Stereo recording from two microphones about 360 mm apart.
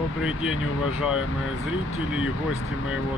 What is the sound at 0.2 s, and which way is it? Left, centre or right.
Speech, centre.